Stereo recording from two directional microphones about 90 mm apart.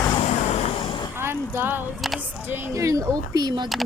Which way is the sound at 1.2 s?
25° right (ahead or behind).